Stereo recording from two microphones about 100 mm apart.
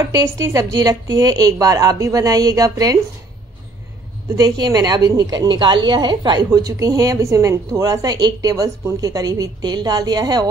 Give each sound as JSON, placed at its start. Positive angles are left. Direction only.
{"t": 0.1, "sound": "a woman's voice", "side_deg": -35}
{"t": 4.4, "sound": "a woman's voice", "side_deg": -40}
{"t": 5.5, "sound": "a woman's voice", "side_deg": -50}